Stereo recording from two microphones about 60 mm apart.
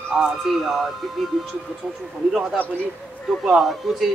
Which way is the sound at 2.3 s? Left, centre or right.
Centre.